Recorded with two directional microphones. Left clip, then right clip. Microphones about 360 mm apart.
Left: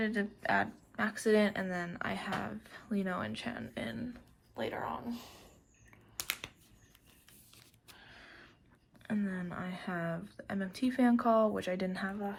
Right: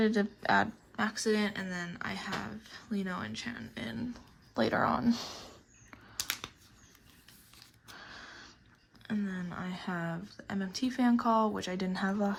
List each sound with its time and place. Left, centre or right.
0.0 s speech: centre
4.5 s speech: centre
9.0 s speech: centre